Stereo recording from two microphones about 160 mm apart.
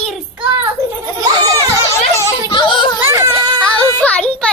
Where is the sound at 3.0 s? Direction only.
15° right (ahead or behind).